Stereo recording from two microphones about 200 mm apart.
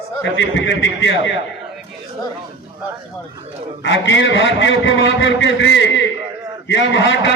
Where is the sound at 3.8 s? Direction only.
65° left (ahead or behind).